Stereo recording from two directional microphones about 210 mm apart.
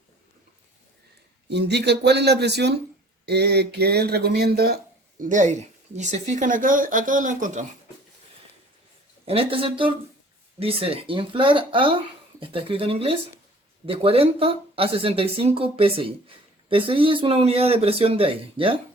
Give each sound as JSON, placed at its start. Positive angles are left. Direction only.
{"t": 1.5, "sound": "speech", "side_deg": -55}
{"t": 5.2, "sound": "speech", "side_deg": -35}
{"t": 9.2, "sound": "speech", "side_deg": -25}